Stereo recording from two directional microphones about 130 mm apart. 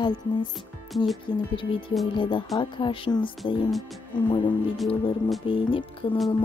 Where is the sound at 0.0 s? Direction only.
35° left (ahead or behind).